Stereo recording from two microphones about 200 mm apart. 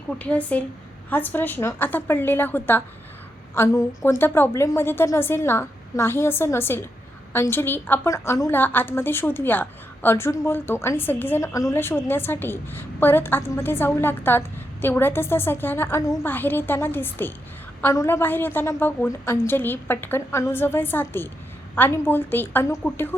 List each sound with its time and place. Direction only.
0.2 s a woman's voice: 5° left (ahead or behind)